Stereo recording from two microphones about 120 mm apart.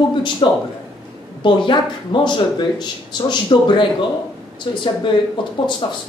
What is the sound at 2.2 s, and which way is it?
Speech, 40° left (ahead or behind).